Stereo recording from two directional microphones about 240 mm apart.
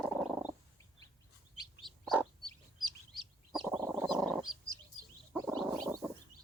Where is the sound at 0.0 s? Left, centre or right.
Centre.